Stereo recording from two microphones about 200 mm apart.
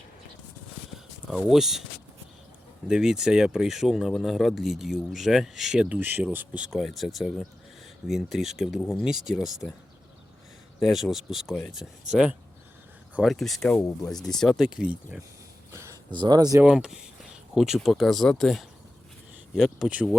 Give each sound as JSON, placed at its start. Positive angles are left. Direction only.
{"t": 1.5, "sound": "speech", "side_deg": 0}
{"t": 2.8, "sound": "speech", "side_deg": -5}
{"t": 10.8, "sound": "speech", "side_deg": 0}
{"t": 15.7, "sound": "a sound", "side_deg": -15}
{"t": 16.6, "sound": "speech", "side_deg": -5}